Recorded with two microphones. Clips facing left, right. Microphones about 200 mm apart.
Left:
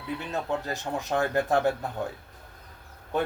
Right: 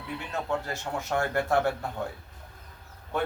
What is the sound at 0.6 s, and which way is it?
Speech, 15° left (ahead or behind).